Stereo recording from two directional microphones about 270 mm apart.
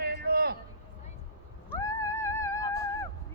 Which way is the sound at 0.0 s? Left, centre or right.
Right.